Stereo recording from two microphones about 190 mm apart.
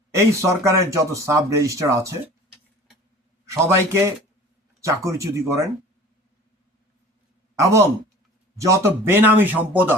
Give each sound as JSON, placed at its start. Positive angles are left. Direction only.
{"t": 0.1, "sound": "speech", "side_deg": -15}
{"t": 3.4, "sound": "a man's voice", "side_deg": -15}
{"t": 7.6, "sound": "speech", "side_deg": -15}